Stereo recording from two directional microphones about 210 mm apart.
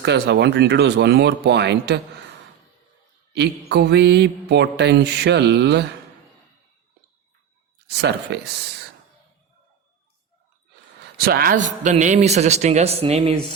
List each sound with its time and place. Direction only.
0.0 s speech: 55° right (ahead or behind)
3.3 s speech: 55° right (ahead or behind)
7.9 s speech: 55° right (ahead or behind)
11.2 s a man's voice: 45° right (ahead or behind); by 13.4 s 30° right (ahead or behind)